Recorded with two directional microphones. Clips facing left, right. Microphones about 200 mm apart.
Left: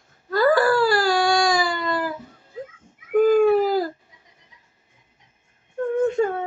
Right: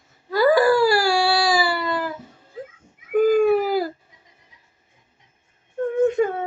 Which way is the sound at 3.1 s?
10° right (ahead or behind).